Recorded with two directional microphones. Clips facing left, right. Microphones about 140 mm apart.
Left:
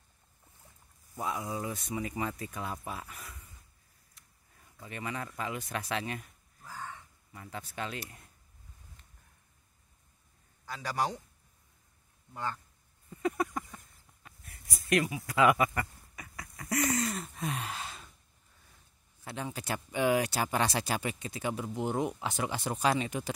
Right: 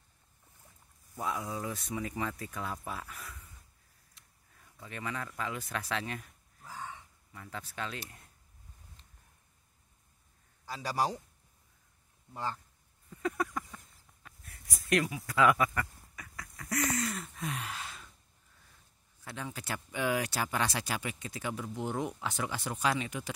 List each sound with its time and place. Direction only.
1.2 s speech: 5° left (ahead or behind)
4.7 s speech: 5° left (ahead or behind)
10.7 s a man's voice: 30° right (ahead or behind)
13.1 s a sound: 15° left (ahead or behind)
14.2 s speech: 5° left (ahead or behind)
15.8 s a sound: 20° left (ahead or behind)
16.5 s a sound: 30° left (ahead or behind)
19.2 s speech: 25° left (ahead or behind)
21.3 s speech: 20° left (ahead or behind)